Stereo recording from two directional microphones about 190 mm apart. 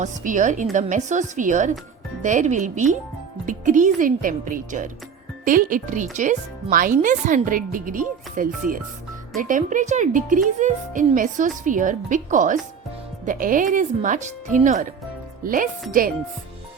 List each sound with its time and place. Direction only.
0.0 s a woman's voice: 40° right (ahead or behind)